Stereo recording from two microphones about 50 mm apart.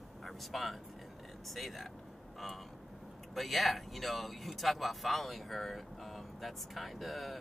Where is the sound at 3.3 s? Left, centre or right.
Centre.